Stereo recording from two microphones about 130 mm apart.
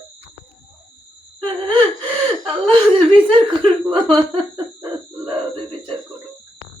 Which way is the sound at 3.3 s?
40° right (ahead or behind).